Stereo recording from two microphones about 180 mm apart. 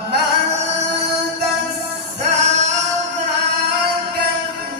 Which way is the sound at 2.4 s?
40° right (ahead or behind).